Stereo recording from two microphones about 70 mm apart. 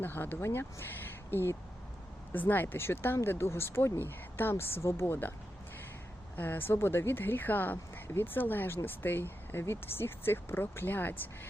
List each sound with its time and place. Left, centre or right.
0.0 s speech: left
6.3 s speech: left